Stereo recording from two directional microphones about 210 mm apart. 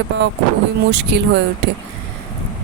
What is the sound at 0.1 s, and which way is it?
Speech, 60° right (ahead or behind).